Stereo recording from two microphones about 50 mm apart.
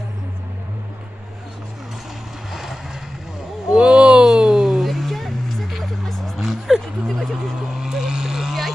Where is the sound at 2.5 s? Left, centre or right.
Centre.